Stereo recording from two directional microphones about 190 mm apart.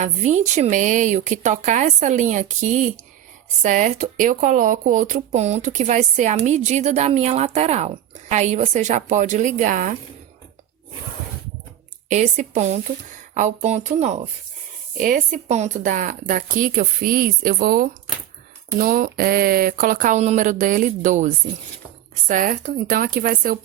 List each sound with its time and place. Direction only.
0.0 s speech: 40° right (ahead or behind)
12.0 s speech: 40° right (ahead or behind)